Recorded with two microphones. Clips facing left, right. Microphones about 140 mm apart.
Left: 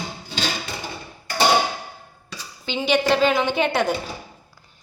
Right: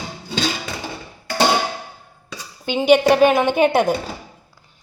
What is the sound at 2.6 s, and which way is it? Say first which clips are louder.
A woman's voice: right 6 dB; 50° right (ahead or behind).